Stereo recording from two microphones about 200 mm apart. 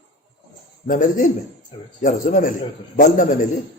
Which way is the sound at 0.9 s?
40° left (ahead or behind).